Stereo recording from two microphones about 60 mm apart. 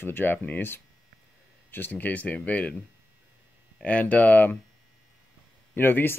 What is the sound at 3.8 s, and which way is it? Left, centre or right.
Speech, left.